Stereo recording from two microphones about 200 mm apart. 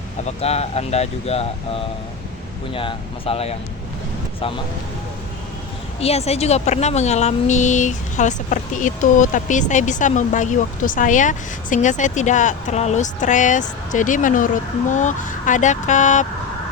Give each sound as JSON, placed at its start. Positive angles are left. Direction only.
{"t": 0.3, "sound": "a woman's voice", "side_deg": 30}
{"t": 6.0, "sound": "a woman's voice", "side_deg": 30}